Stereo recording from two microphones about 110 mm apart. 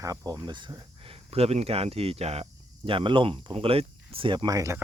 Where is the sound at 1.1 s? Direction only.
65° right (ahead or behind).